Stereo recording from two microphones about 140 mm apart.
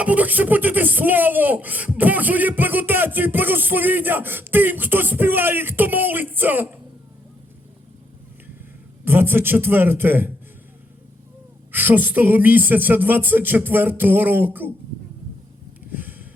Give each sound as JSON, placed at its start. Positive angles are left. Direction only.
{"t": 0.0, "sound": "speech", "side_deg": -10}
{"t": 9.0, "sound": "speech", "side_deg": -15}
{"t": 11.7, "sound": "speech", "side_deg": -15}
{"t": 15.9, "sound": "a sound", "side_deg": -15}